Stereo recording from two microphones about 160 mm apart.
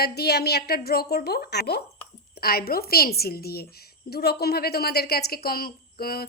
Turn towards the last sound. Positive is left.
turn(degrees=70)  # may be behind; listen again after turning